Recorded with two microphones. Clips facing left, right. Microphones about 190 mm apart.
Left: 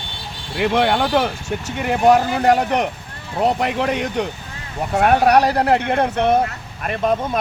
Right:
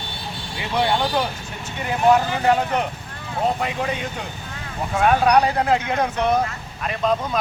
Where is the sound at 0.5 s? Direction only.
65° left (ahead or behind).